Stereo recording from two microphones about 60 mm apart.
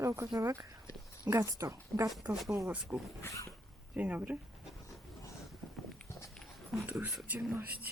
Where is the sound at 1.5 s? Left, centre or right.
Right.